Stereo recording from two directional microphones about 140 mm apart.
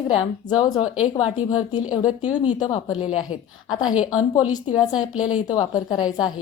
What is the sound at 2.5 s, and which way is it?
A woman's voice, 35° left (ahead or behind).